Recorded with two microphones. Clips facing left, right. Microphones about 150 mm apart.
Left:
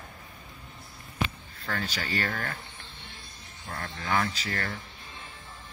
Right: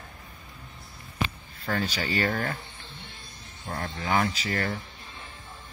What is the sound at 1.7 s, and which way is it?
Speech, 20° right (ahead or behind).